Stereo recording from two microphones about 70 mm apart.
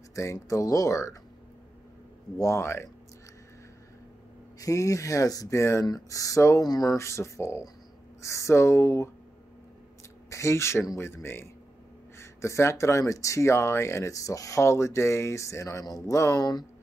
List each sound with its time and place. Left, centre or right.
0.1 s speech: left
2.3 s speech: left
4.6 s speech: left
5.9 s speech: left
6.6 s speech: left
7.0 s speech: left
10.3 s speech: left